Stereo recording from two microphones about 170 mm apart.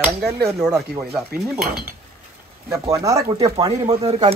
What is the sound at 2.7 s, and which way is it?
Speech, 20° right (ahead or behind).